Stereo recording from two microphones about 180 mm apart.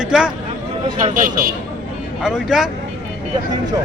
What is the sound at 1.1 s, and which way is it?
Speech, 50° right (ahead or behind).